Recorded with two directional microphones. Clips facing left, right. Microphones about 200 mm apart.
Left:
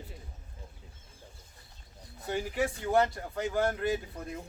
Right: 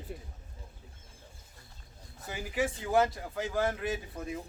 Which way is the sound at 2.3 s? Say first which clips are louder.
Left 2 dB; centre (ahead or behind).